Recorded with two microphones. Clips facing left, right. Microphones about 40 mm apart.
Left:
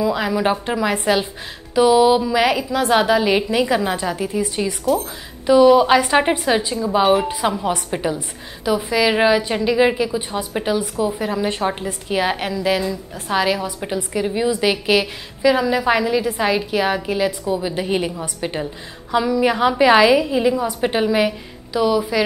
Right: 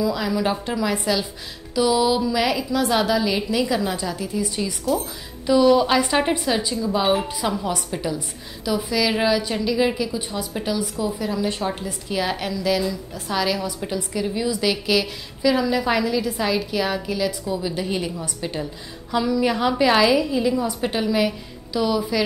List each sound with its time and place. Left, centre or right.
0.0 s a woman's voice: left
0.9 s a woman's voice: left
19.1 s a woman's voice: centre